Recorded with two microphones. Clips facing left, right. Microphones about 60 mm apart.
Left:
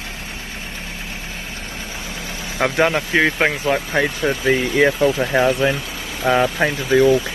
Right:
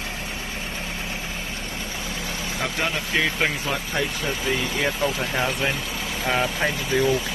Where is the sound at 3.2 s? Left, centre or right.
Left.